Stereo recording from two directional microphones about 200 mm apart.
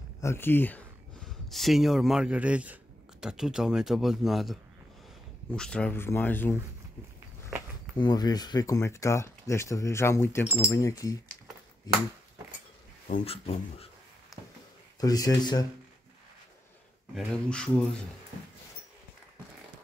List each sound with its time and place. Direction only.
0.2 s speech: 10° left (ahead or behind)
8.0 s speech: 20° left (ahead or behind)
13.1 s speech: 30° left (ahead or behind)
15.0 s speech: 20° left (ahead or behind)
17.1 s speech: 5° left (ahead or behind)